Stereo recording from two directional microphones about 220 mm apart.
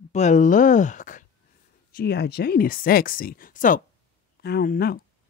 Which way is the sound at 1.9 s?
45° left (ahead or behind).